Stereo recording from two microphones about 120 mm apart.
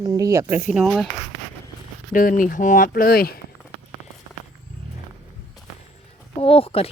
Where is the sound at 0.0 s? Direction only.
30° right (ahead or behind).